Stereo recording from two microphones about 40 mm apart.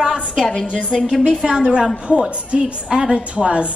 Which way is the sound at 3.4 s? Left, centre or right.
Right.